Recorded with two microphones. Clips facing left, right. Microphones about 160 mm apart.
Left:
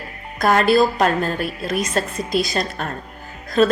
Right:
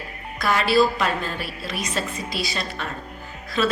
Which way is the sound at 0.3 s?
45° left (ahead or behind).